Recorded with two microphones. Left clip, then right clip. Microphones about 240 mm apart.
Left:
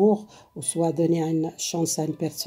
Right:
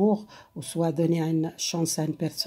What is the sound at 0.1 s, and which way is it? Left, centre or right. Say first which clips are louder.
Speech: left 3 dB; right.